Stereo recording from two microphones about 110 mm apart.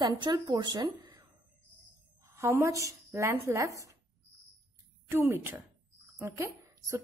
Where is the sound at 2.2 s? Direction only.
25° right (ahead or behind).